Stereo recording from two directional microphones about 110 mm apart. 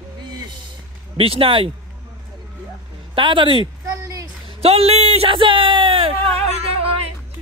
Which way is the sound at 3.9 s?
30° right (ahead or behind).